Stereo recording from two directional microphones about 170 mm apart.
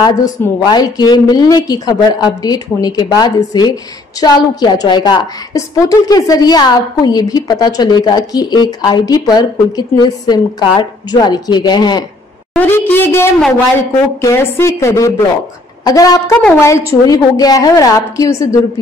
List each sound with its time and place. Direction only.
0.7 s a woman's voice: 25° left (ahead or behind)
12.5 s a woman's voice: 10° left (ahead or behind)